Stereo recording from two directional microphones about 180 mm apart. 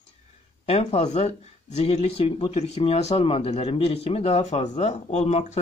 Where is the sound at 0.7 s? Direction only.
35° left (ahead or behind).